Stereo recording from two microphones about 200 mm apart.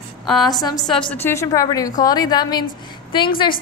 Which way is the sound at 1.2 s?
15° left (ahead or behind).